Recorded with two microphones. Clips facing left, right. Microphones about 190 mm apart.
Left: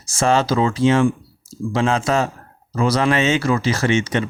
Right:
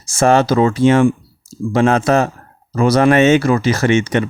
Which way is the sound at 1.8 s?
50° right (ahead or behind).